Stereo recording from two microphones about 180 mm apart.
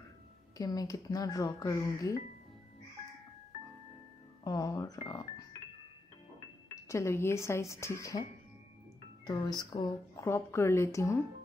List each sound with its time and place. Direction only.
0.6 s speech: 20° left (ahead or behind)
4.5 s speech: 20° left (ahead or behind)
6.7 s speech: 15° left (ahead or behind)